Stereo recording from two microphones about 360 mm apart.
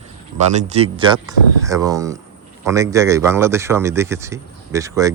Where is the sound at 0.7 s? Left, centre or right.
Centre.